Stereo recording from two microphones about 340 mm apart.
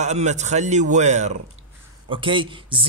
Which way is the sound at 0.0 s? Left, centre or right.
Centre.